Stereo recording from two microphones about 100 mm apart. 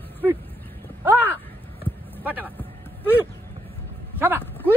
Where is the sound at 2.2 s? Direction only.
15° right (ahead or behind).